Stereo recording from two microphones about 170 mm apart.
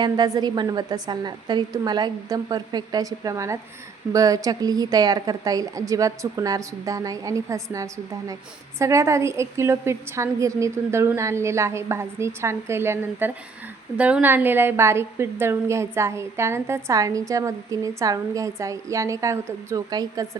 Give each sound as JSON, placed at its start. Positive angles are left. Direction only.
{"t": 0.0, "sound": "a woman's voice", "side_deg": -25}